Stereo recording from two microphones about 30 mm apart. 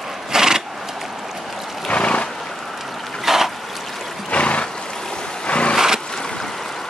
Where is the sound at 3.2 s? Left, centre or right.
Centre.